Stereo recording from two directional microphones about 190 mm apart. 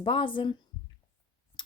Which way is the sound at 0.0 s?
25° left (ahead or behind).